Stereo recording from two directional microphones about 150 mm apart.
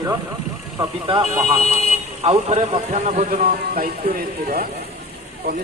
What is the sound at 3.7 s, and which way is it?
Speech, 85° right.